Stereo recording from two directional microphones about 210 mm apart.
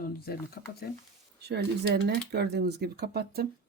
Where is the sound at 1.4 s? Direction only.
50° right (ahead or behind).